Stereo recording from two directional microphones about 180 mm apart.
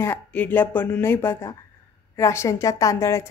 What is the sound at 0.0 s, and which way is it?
A woman's voice, 10° left (ahead or behind).